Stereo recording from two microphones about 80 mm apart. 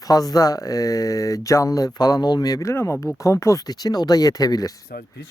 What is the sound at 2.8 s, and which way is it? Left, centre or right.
Speech, left.